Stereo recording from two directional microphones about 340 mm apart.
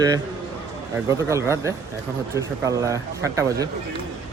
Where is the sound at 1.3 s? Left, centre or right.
Centre.